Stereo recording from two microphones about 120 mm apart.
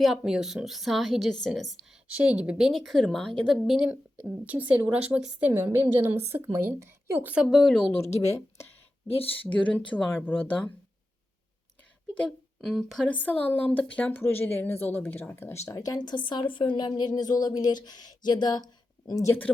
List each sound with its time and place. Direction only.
0.0 s a woman's voice: 5° right (ahead or behind)
2.0 s a woman's voice: 10° right (ahead or behind)
3.8 s a woman's voice: 10° right (ahead or behind)
7.4 s a woman's voice: centre (ahead or behind)
7.9 s speech: 60° left (ahead or behind)
9.4 s speech: 10° left (ahead or behind)
12.1 s speech: 5° left (ahead or behind)
13.1 s a woman's voice: 15° left (ahead or behind); by 19.3 s 30° left (ahead or behind)